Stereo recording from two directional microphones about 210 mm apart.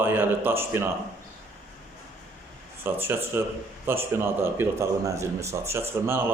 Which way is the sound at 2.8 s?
10° right (ahead or behind).